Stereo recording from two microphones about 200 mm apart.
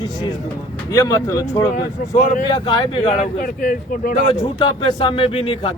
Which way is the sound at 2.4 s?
20° left (ahead or behind).